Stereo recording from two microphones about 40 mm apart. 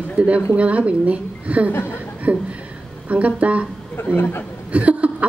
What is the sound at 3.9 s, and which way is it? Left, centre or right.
Speech, left.